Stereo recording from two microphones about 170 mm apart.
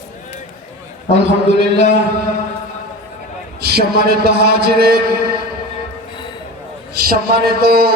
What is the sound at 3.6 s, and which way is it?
A man's voice, 65° right (ahead or behind).